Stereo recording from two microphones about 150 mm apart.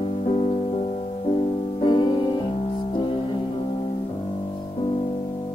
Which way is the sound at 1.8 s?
30° left (ahead or behind).